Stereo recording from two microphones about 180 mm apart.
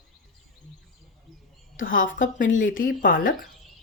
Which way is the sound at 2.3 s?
90° left.